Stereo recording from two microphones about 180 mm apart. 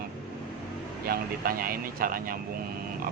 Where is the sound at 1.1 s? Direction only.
55° right (ahead or behind).